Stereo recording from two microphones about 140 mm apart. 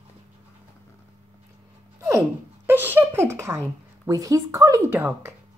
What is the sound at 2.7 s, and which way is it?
Speech, 15° right (ahead or behind).